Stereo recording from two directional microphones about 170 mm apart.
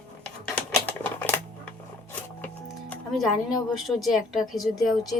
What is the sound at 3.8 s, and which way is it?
Speech, centre (ahead or behind).